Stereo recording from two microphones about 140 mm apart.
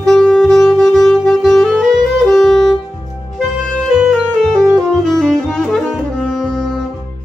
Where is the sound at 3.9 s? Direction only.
Centre (ahead or behind).